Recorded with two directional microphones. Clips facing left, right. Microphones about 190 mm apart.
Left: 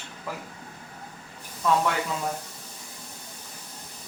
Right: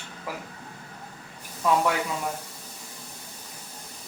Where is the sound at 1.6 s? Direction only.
10° right (ahead or behind).